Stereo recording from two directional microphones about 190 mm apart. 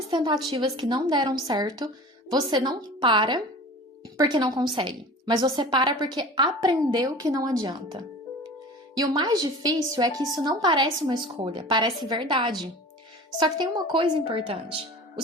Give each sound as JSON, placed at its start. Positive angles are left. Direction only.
{"t": 0.1, "sound": "a woman's voice", "side_deg": -25}